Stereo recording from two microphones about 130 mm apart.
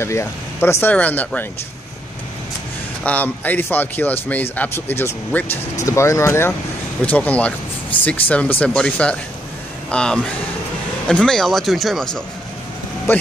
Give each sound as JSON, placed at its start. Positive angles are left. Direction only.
{"t": 0.0, "sound": "speech", "side_deg": 20}
{"t": 3.0, "sound": "speech", "side_deg": 10}
{"t": 13.1, "sound": "speech", "side_deg": 15}